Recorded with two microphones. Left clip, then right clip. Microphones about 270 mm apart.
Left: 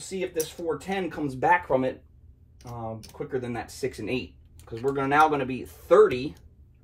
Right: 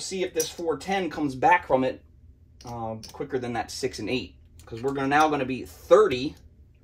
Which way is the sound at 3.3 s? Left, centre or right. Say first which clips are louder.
Right 3 dB; centre.